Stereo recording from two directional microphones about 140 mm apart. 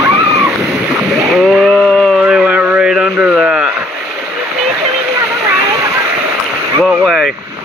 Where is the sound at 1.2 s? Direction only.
Centre (ahead or behind).